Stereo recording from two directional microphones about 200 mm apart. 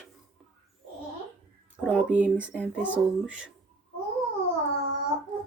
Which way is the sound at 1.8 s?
5° right (ahead or behind).